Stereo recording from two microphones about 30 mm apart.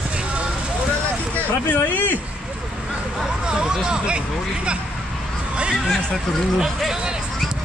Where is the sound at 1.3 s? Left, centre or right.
Left.